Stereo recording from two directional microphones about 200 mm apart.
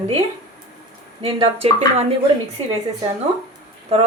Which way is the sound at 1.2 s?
30° right (ahead or behind).